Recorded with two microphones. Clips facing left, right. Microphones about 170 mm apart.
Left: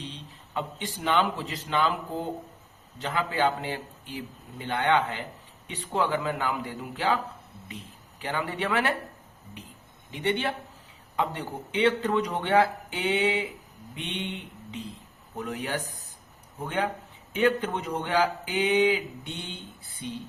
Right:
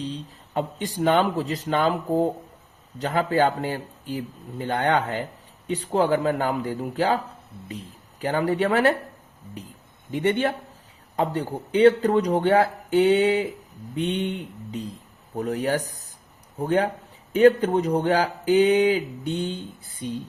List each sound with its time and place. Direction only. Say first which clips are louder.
0.0 s speech: right 9 dB; 40° right (ahead or behind)
10.1 s a man's voice: right 6 dB; 45° right (ahead or behind)